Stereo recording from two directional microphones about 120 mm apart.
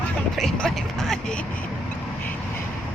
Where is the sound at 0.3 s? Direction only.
5° left (ahead or behind).